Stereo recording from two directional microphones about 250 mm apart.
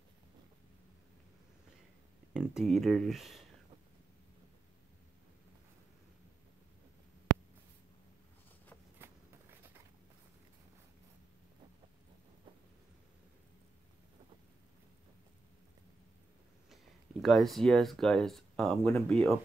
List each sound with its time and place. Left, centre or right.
2.3 s speech: centre
8.9 s walk: centre
16.7 s speech: centre